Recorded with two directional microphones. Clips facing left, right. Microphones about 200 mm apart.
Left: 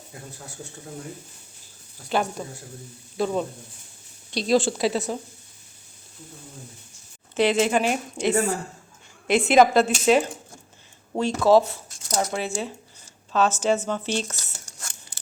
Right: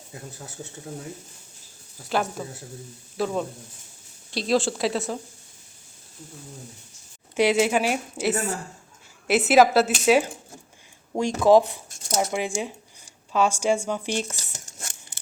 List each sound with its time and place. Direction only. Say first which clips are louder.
2.0 s speech: left 1 dB; centre (ahead or behind)
7.3 s a woman's voice: even; 10° right (ahead or behind)
11.4 s speech: right 1 dB; 15° right (ahead or behind)